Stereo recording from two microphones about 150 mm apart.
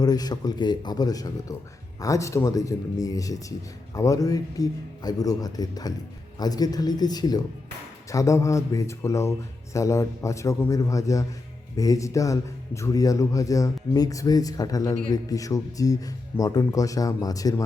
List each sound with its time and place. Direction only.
0.0 s speech: 25° left (ahead or behind)